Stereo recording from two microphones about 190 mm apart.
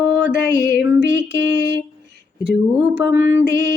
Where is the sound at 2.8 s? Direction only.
10° right (ahead or behind).